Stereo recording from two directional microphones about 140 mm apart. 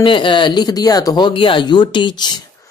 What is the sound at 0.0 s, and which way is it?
Speech, 35° left (ahead or behind).